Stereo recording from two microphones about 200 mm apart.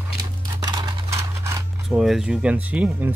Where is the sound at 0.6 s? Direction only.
20° right (ahead or behind).